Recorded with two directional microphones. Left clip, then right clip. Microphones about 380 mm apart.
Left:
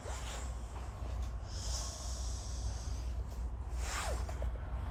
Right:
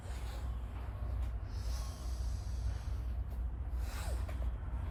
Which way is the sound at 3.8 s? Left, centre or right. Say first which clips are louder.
Left 9 dB; centre.